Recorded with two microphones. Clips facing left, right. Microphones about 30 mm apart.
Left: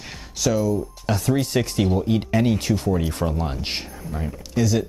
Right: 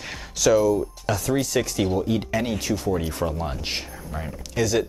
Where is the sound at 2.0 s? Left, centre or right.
Centre.